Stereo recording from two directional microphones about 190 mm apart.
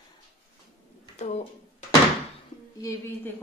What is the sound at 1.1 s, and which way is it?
Speech, 35° left (ahead or behind).